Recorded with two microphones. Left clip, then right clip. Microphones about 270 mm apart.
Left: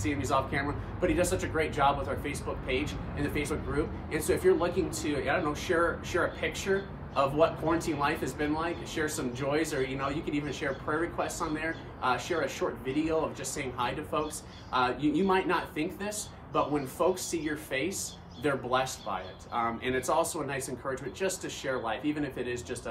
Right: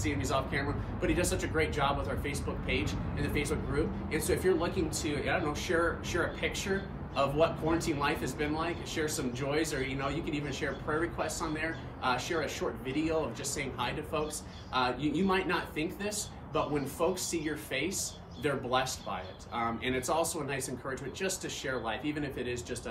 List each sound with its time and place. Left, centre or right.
0.0 s a man's voice: centre